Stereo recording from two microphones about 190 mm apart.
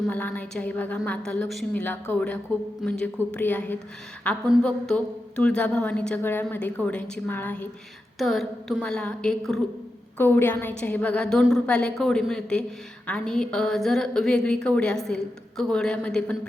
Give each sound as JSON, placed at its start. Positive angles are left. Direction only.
{"t": 0.0, "sound": "a woman's voice", "side_deg": 10}